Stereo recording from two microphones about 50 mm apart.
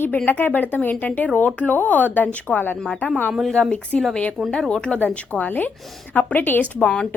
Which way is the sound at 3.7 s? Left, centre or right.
Left.